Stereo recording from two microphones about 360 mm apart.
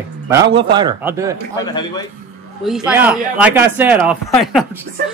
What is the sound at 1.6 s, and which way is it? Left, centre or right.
Speech, centre.